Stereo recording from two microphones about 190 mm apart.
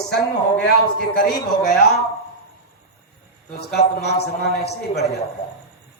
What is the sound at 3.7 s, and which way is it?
A man's voice, 60° left (ahead or behind).